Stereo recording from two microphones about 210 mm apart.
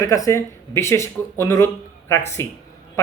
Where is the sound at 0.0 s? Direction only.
15° left (ahead or behind).